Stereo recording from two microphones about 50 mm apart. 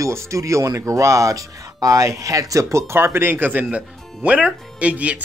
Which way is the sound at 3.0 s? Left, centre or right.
Right.